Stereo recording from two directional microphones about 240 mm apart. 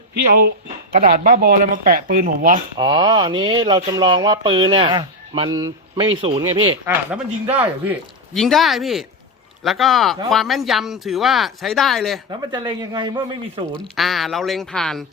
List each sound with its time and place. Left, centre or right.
0.9 s speech: right
2.7 s speech: centre
6.9 s speech: centre
12.5 s speech: centre
13.9 s speech: centre